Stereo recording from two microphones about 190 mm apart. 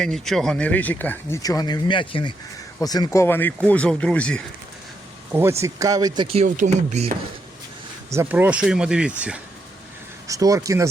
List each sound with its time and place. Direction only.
0.0 s speech: centre (ahead or behind)
1.4 s speech: 20° left (ahead or behind)
5.3 s speech: 15° right (ahead or behind); by 7.2 s 35° right (ahead or behind)
8.1 s speech: 10° right (ahead or behind)
10.2 s speech: 15° right (ahead or behind)